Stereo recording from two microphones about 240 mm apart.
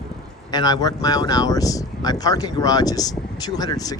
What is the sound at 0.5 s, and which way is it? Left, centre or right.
Speech, centre.